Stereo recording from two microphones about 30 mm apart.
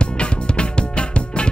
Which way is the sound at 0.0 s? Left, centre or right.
Left.